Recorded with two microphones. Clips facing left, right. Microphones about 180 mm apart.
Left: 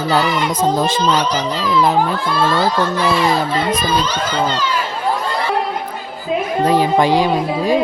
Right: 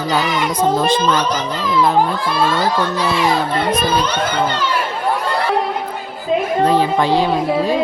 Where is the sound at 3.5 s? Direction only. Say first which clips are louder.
Right 1 dB; 55° right (ahead or behind).